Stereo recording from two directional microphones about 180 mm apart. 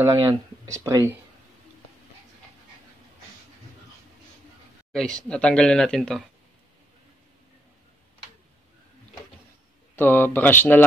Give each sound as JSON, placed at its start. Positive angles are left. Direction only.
{"t": 0.0, "sound": "speech", "side_deg": -15}
{"t": 4.9, "sound": "speech", "side_deg": 5}
{"t": 9.9, "sound": "speech", "side_deg": 10}